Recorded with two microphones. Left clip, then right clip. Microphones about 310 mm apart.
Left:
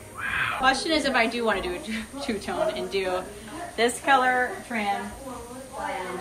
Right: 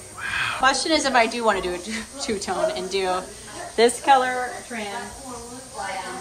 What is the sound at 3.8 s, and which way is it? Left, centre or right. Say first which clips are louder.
Speech: right 6 dB; right.